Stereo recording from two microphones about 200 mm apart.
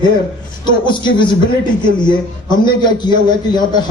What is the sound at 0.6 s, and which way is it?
A man's voice, 25° left (ahead or behind).